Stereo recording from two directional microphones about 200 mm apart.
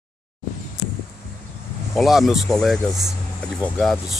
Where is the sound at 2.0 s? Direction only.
Centre (ahead or behind).